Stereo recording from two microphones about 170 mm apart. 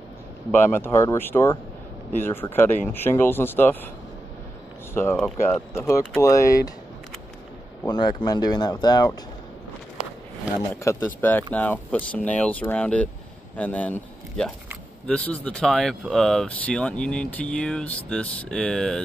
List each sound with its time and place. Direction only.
0.5 s speech: 15° left (ahead or behind)
4.9 s speech: 15° left (ahead or behind)
7.8 s speech: 25° left (ahead or behind)
10.8 s speech: 15° left (ahead or behind)